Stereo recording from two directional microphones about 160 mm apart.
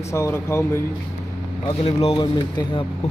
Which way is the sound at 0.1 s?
15° left (ahead or behind).